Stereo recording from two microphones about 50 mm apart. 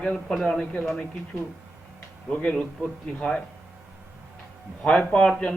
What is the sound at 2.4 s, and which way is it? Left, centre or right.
Speech, left.